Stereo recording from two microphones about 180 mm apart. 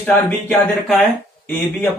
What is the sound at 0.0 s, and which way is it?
Speech, 10° left (ahead or behind).